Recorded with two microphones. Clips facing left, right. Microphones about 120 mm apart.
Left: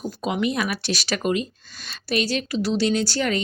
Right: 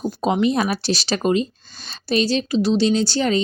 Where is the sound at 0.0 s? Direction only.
30° right (ahead or behind).